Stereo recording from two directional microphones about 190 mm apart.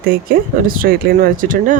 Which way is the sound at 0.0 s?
50° right (ahead or behind).